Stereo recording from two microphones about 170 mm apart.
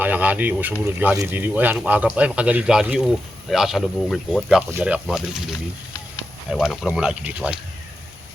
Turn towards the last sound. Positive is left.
turn(degrees=-5)  # may be behind; listen again after turning